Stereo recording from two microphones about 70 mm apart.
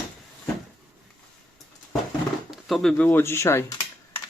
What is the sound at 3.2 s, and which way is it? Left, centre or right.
Speech, left.